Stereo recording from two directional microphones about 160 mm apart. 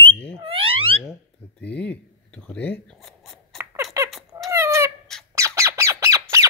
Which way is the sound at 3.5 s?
20° right (ahead or behind).